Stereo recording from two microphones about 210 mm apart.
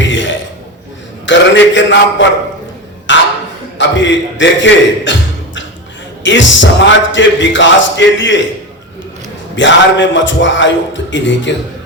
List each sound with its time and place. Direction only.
0.1 s a sound: 60° left (ahead or behind)
1.3 s a man's voice: 60° left (ahead or behind)
3.1 s a sound: 60° left (ahead or behind)
3.8 s speech: 60° left (ahead or behind)
6.2 s speech: 60° left (ahead or behind)
9.6 s speech: 60° left (ahead or behind)